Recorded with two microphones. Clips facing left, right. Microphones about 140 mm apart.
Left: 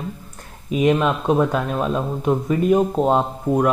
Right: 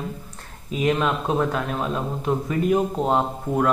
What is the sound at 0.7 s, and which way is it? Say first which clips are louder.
Speech: left 4 dB; 20° left (ahead or behind).